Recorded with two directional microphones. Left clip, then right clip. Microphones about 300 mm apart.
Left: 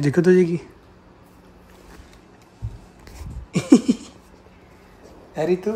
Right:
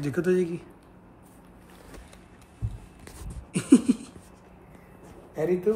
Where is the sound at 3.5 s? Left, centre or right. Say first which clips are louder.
Left 5 dB; left.